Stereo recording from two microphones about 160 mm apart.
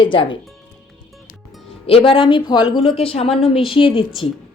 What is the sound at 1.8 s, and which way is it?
A woman's voice, 35° left (ahead or behind).